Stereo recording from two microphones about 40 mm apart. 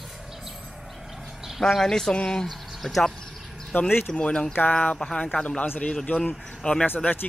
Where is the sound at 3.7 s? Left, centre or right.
Left.